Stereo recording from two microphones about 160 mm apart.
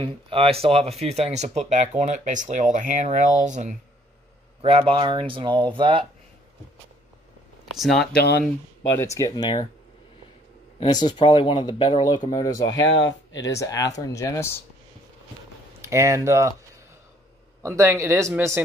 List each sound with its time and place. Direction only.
0.0 s speech: 35° right (ahead or behind); by 3.7 s 50° right (ahead or behind)
4.6 s speech: 35° right (ahead or behind)
7.7 s speech: centre (ahead or behind)
8.1 s speech: 90° left
8.9 s speech: 20° left (ahead or behind)
11.1 s speech: 30° left (ahead or behind)
15.8 s speech: 20° right (ahead or behind)
17.6 s speech: 20° right (ahead or behind)